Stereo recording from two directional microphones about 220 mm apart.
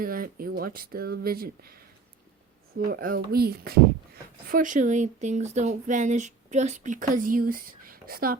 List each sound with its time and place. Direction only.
0.0 s speech: 40° right (ahead or behind)
2.7 s speech: 45° right (ahead or behind)